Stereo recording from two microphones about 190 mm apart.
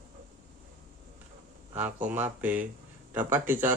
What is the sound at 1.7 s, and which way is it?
Speech, 10° right (ahead or behind).